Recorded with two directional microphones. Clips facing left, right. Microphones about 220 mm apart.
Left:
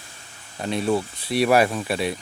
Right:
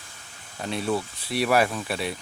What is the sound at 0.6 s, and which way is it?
Speech, 20° left (ahead or behind).